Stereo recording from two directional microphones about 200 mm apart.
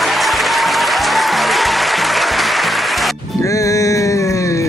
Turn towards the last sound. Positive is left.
turn(degrees=15)  # may be behind; listen again after turning